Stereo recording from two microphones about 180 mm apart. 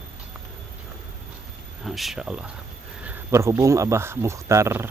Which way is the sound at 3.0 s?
15° right (ahead or behind).